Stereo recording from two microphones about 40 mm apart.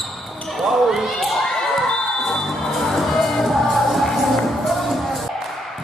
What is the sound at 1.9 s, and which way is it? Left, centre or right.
Music, centre.